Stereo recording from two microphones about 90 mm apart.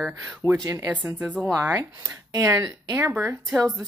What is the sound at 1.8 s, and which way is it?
Speech, 35° right (ahead or behind).